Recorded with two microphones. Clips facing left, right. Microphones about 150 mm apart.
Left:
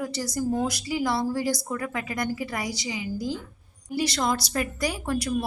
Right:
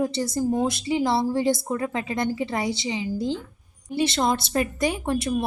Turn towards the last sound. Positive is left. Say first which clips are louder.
# right 3 dB
turn(degrees=-25)  # may be behind; listen again after turning